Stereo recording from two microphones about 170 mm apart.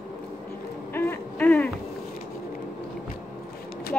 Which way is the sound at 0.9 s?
10° left (ahead or behind).